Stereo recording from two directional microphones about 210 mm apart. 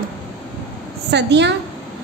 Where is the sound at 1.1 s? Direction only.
55° right (ahead or behind).